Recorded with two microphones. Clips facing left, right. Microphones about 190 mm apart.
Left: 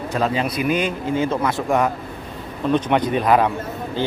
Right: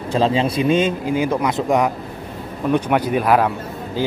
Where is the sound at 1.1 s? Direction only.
15° right (ahead or behind).